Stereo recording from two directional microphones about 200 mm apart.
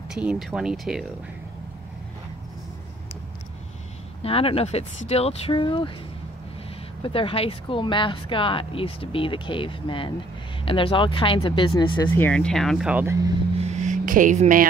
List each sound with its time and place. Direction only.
0.1 s speech: 5° right (ahead or behind)
4.2 s speech: 30° left (ahead or behind)
7.0 s speech: 25° left (ahead or behind)
12.1 s speech: 10° left (ahead or behind); by 13.3 s 15° right (ahead or behind)
13.6 s music: 35° right (ahead or behind)